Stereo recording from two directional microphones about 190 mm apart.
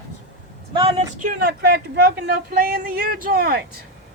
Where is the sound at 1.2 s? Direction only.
50° right (ahead or behind).